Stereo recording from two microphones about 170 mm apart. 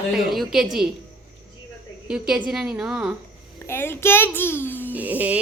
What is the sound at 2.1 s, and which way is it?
A woman's voice, 5° right (ahead or behind).